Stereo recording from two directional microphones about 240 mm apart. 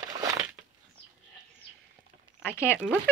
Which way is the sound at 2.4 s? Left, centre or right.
Centre.